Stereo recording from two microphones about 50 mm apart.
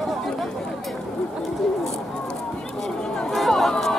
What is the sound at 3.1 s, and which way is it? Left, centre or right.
Chatter, centre.